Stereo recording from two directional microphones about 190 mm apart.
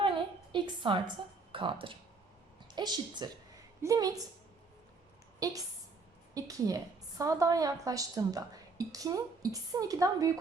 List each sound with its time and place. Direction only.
0.0 s a sound: 25° right (ahead or behind)
1.5 s a woman's voice: 25° right (ahead or behind)
5.4 s a woman's voice: 20° right (ahead or behind)